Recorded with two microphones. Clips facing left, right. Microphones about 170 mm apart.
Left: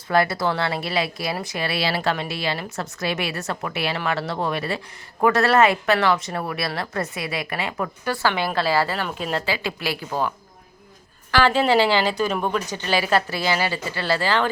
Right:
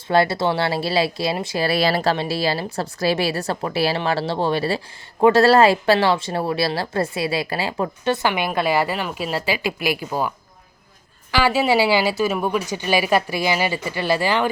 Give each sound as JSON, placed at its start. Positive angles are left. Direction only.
{"t": 0.1, "sound": "a woman's voice", "side_deg": -30}